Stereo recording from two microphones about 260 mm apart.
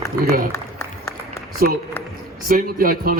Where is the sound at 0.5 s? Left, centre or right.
Centre.